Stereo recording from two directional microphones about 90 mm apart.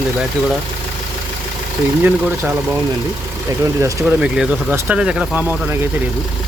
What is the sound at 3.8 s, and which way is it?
Speech, 35° right (ahead or behind).